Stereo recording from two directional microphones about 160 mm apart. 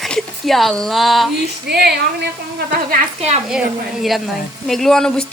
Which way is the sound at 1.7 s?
90° right.